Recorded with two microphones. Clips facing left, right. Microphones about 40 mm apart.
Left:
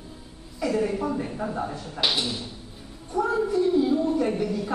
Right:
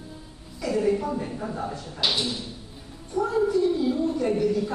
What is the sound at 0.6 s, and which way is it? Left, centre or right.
A man's voice, centre.